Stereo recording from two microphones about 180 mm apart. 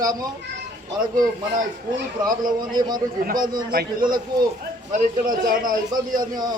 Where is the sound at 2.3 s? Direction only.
20° right (ahead or behind).